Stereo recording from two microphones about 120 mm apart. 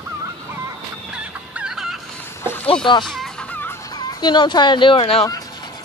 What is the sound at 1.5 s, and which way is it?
Chicken, 5° right (ahead or behind).